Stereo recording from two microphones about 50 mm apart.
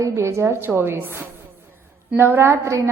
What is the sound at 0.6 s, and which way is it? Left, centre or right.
A woman's voice, right.